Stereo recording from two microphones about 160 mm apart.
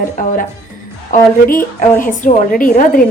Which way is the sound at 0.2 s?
55° left (ahead or behind).